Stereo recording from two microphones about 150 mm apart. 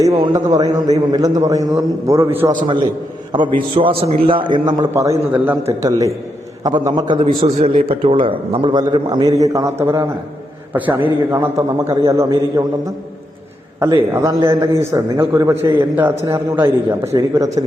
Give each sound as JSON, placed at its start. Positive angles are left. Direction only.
{"t": 0.0, "sound": "a man's voice", "side_deg": -20}
{"t": 2.5, "sound": "a man's voice", "side_deg": -30}
{"t": 6.6, "sound": "a man's voice", "side_deg": -25}
{"t": 14.1, "sound": "a man's voice", "side_deg": -20}